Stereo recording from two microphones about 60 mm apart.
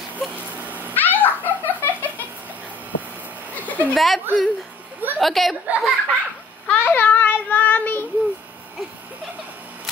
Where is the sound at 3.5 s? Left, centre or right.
Left.